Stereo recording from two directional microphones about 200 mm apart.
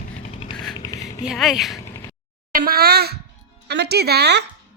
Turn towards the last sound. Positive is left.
turn(degrees=-55)  # may be behind; listen again after turning